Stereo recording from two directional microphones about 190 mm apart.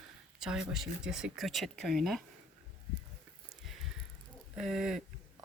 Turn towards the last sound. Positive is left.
turn(degrees=0)  # may be behind; listen again after turning